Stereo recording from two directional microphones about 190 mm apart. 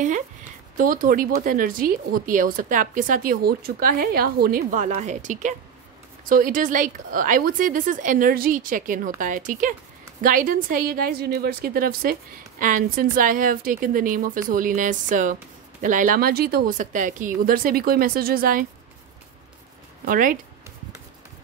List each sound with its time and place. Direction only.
0.7 s speech: 45° right (ahead or behind)
20.1 s speech: 45° right (ahead or behind)